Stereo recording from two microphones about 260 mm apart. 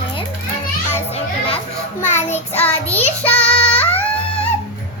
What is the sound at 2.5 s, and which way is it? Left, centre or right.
Child singing, centre.